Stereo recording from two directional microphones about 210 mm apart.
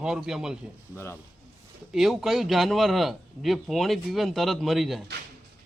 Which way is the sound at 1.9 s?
Centre (ahead or behind).